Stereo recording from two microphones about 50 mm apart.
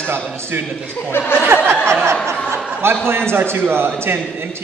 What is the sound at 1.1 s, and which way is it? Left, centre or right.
Speech, left.